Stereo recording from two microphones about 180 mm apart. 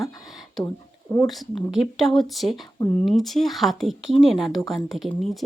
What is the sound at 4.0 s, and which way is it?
Speech, 90° right.